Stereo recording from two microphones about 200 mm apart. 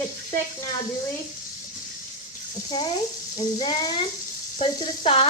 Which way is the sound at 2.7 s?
20° left (ahead or behind).